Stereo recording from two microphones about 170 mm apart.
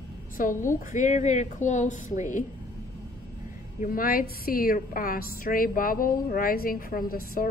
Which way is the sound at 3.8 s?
55° left (ahead or behind).